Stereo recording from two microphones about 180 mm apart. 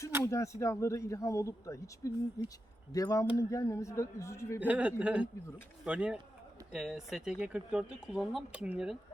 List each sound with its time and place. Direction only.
0.3 s speech: 15° left (ahead or behind)
4.6 s speech: 10° right (ahead or behind)